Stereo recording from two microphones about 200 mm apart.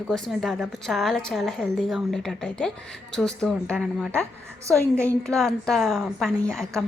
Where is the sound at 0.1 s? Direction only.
Centre (ahead or behind).